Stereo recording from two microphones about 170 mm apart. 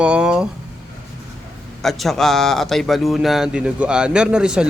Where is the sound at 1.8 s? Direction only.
Centre (ahead or behind).